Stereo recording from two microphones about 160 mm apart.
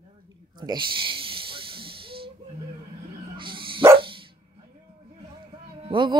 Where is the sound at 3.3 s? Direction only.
30° right (ahead or behind).